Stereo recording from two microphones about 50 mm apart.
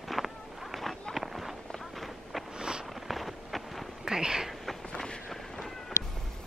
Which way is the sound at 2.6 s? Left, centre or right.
Centre.